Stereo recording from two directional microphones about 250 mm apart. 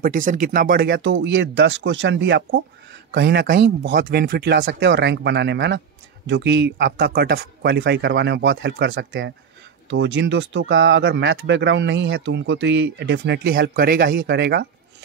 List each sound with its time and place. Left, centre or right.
0.0 s speech: right